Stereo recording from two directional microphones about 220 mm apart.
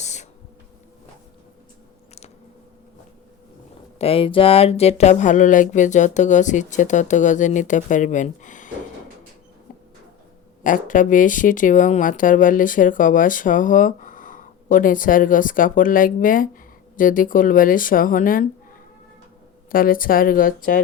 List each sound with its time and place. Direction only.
0.0 s a sound: 30° left (ahead or behind)
3.9 s speech: 25° left (ahead or behind)
10.6 s speech: 35° left (ahead or behind)
19.7 s speech: 40° left (ahead or behind)